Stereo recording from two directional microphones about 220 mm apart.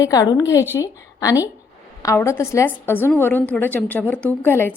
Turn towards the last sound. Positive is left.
turn(degrees=10)  # may be behind; listen again after turning